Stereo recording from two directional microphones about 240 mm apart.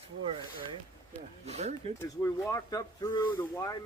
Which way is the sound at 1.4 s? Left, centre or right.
Right.